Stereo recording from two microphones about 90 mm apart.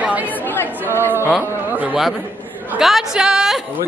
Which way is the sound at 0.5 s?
20° left (ahead or behind).